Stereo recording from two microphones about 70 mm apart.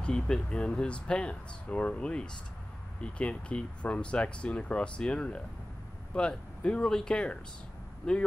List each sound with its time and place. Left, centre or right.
0.0 s speech: centre